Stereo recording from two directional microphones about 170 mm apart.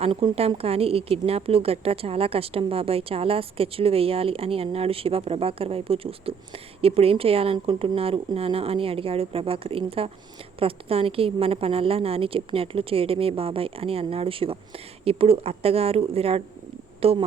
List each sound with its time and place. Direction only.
0.0 s a woman's voice: 35° right (ahead or behind)